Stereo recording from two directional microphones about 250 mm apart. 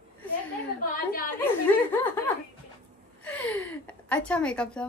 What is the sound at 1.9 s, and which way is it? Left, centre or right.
Speech, centre.